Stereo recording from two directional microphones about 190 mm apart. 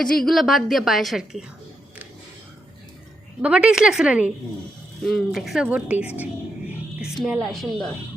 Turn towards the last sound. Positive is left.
turn(degrees=0)  # may be behind; listen again after turning